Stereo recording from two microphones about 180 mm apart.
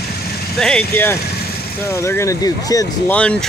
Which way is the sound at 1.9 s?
15° left (ahead or behind).